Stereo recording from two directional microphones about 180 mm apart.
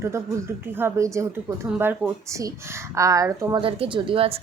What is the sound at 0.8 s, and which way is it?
Speech, 15° right (ahead or behind).